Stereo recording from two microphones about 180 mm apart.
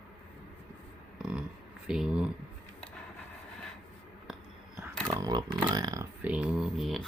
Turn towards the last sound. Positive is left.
turn(degrees=0)  # may be behind; listen again after turning